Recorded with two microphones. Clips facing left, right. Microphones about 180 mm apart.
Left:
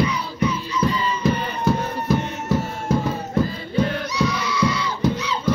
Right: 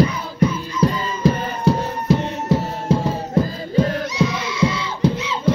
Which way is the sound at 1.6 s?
30° right (ahead or behind).